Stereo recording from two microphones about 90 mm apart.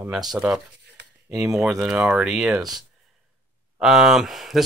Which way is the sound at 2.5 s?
50° right (ahead or behind).